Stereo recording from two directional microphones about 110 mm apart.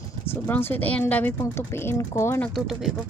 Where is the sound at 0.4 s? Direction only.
20° left (ahead or behind).